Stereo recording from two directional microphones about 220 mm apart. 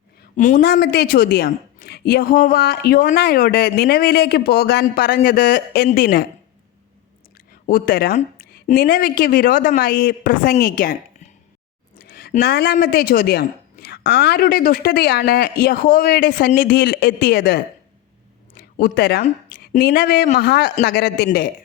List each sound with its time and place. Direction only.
0.2 s a woman's voice: 35° left (ahead or behind)
7.7 s a woman's voice: 40° left (ahead or behind)